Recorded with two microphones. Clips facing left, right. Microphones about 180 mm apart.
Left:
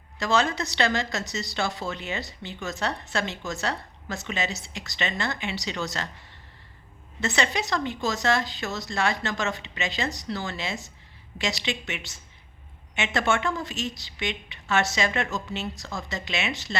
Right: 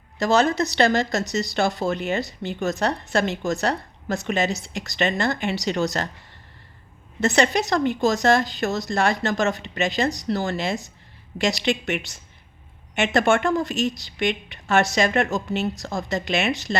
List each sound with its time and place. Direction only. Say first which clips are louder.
0.2 s a woman's voice: right 5 dB; 40° right (ahead or behind)
7.2 s a woman's voice: right 7 dB; 45° right (ahead or behind)